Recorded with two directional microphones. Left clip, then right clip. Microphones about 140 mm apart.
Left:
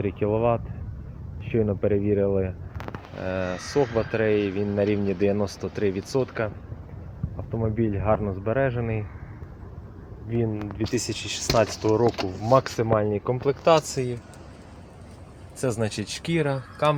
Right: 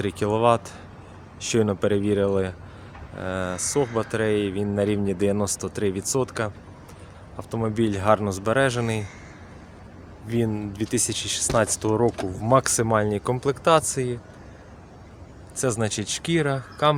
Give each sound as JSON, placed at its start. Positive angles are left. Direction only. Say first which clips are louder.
{"t": 0.0, "sound": "speech", "louder": "right 2 dB", "side_deg": -40}
{"t": 3.2, "sound": "speech", "louder": "right 1 dB", "side_deg": -20}
{"t": 7.5, "sound": "speech", "louder": "right 2 dB", "side_deg": -35}
{"t": 10.2, "sound": "speech", "louder": "right 2 dB", "side_deg": -45}
{"t": 10.9, "sound": "speech", "louder": "right 4 dB", "side_deg": -25}
{"t": 15.6, "sound": "speech", "louder": "right 2 dB", "side_deg": -25}